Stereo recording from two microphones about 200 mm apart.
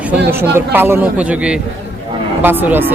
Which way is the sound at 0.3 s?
10° right (ahead or behind).